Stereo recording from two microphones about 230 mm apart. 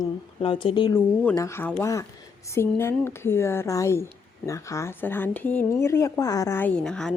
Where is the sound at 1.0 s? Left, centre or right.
Centre.